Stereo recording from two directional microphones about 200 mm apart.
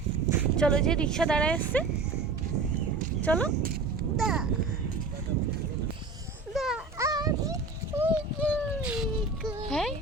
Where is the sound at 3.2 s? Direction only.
5° left (ahead or behind).